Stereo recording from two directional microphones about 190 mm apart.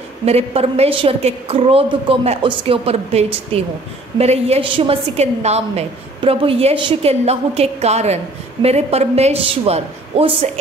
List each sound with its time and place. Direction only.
0.2 s a woman's voice: 35° right (ahead or behind)